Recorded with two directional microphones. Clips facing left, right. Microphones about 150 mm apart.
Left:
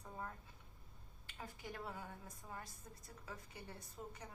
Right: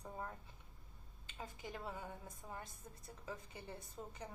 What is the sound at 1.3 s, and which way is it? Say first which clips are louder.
A woman's voice: right 2 dB; 20° right (ahead or behind).